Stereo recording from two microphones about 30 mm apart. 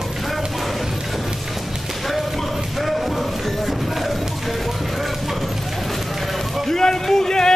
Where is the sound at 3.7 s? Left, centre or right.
Centre.